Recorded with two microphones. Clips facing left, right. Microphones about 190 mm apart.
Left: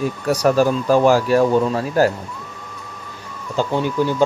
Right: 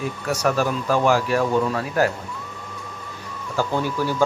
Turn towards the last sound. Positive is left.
turn(degrees=20)  # may be behind; listen again after turning